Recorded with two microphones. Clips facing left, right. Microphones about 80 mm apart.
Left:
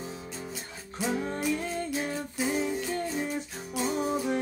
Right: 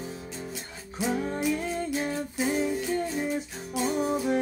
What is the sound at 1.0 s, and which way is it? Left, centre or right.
Music, centre.